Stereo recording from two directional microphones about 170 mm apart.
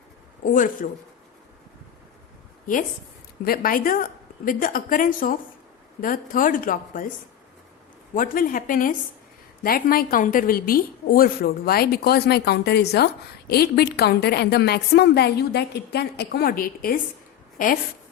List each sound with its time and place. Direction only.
0.5 s a woman's voice: 50° left (ahead or behind)
3.4 s a woman's voice: 60° left (ahead or behind)
8.1 s a woman's voice: 55° left (ahead or behind)